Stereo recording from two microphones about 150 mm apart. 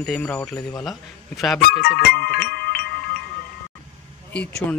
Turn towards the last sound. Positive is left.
turn(degrees=10)  # may be behind; listen again after turning